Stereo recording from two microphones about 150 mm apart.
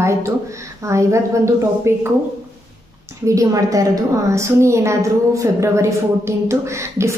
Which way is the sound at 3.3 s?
20° right (ahead or behind).